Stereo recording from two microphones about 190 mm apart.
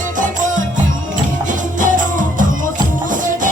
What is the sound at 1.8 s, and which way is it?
Music, 45° right (ahead or behind).